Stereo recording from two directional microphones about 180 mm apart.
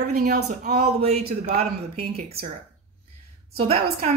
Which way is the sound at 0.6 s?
40° right (ahead or behind).